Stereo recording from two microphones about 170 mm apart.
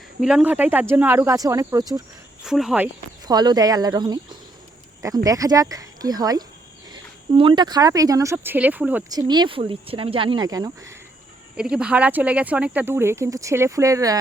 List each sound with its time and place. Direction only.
0.2 s speech: 5° right (ahead or behind); by 2.0 s 20° right (ahead or behind)
2.4 s speech: 5° right (ahead or behind)
3.2 s speech: 25° right (ahead or behind)
9.0 s speech: 25° right (ahead or behind)
11.5 s speech: 5° right (ahead or behind)